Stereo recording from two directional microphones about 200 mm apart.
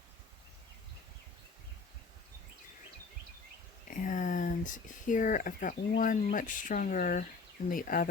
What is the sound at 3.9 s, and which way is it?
Speech, 40° left (ahead or behind).